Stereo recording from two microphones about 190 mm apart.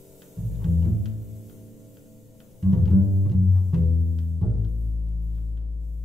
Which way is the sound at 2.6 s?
Centre (ahead or behind).